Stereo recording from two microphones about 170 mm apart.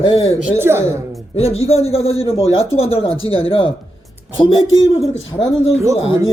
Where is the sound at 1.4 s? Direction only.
35° left (ahead or behind).